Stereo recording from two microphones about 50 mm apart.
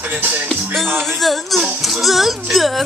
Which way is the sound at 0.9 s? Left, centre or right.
Centre.